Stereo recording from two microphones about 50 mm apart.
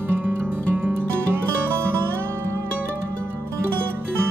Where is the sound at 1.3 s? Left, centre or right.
Right.